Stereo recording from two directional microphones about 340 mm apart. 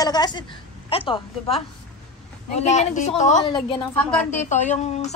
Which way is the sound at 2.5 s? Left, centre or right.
Centre.